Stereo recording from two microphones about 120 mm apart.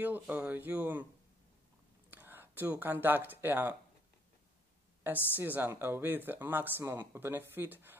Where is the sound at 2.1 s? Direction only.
15° right (ahead or behind).